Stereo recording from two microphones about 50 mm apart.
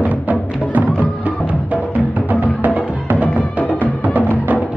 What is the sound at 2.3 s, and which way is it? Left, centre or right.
Music, right.